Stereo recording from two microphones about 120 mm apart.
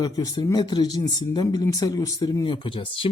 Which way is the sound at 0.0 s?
35° left (ahead or behind).